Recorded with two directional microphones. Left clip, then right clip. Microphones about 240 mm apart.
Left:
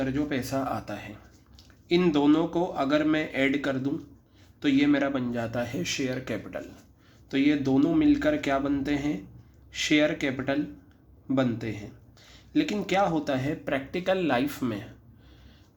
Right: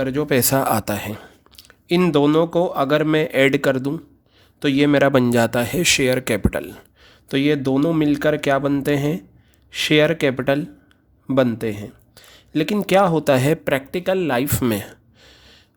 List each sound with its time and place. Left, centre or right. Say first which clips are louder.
0.0 s a man's voice: right 10 dB; right
7.0 s speech: right 5 dB; right